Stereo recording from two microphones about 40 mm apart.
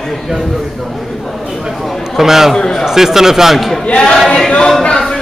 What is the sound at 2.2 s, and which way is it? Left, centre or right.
Speech, centre.